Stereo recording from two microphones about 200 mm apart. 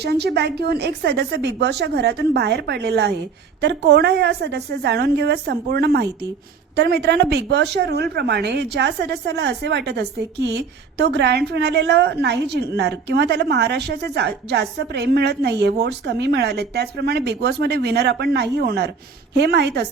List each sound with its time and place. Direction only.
0.0 s a woman's voice: 55° right (ahead or behind)